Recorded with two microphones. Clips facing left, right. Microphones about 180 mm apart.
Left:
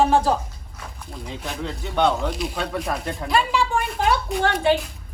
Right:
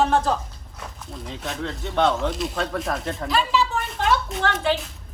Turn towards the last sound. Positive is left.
turn(degrees=0)  # may be behind; listen again after turning